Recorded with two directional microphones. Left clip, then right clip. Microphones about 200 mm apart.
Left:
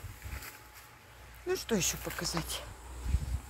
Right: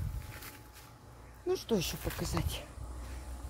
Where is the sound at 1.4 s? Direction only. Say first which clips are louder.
Left 1 dB; 15° right (ahead or behind).